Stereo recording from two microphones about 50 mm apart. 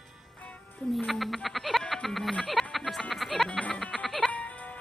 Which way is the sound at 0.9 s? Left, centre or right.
Centre.